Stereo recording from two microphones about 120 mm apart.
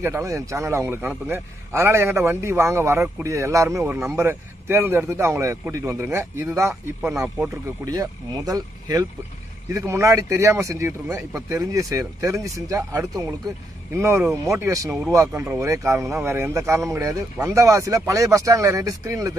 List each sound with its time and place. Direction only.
0.0 s a man's voice: 25° right (ahead or behind)